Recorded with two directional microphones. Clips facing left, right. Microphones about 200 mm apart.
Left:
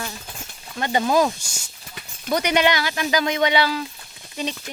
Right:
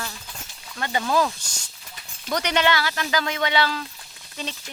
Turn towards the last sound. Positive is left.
turn(degrees=15)  # may be behind; listen again after turning